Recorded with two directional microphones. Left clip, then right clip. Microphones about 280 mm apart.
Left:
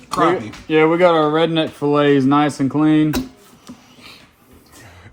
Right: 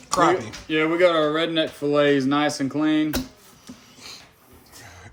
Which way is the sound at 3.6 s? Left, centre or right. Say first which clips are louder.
Left 1 dB; centre.